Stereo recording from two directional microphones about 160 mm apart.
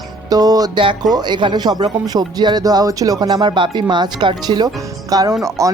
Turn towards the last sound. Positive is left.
turn(degrees=-20)  # may be behind; listen again after turning